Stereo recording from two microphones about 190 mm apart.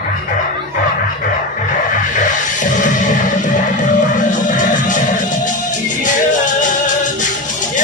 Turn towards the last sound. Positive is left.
turn(degrees=40)  # may be behind; listen again after turning